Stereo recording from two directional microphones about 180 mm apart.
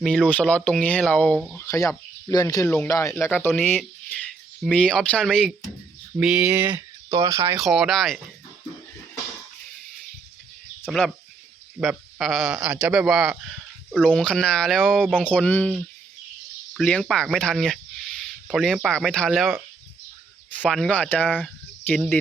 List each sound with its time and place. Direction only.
0.0 s speech: 5° left (ahead or behind)
1.5 s speech: 15° left (ahead or behind)
2.6 s speech: 10° left (ahead or behind); by 7.6 s 20° right (ahead or behind)
7.6 s speech: centre (ahead or behind)
10.8 s speech: centre (ahead or behind)
15.2 s speech: 10° left (ahead or behind)
16.7 s speech: centre (ahead or behind)
20.6 s speech: 5° left (ahead or behind)